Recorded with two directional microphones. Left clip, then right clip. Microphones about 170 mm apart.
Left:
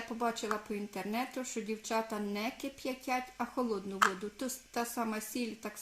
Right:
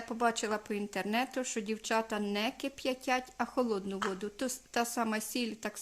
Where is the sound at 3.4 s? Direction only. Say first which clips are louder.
Right 3 dB; 25° right (ahead or behind).